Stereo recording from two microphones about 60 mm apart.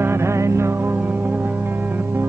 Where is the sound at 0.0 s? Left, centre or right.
Right.